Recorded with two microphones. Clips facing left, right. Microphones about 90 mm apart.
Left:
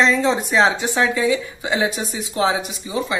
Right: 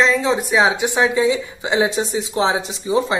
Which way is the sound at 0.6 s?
15° right (ahead or behind).